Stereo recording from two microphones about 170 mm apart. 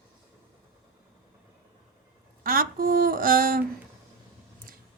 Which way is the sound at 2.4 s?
55° right (ahead or behind).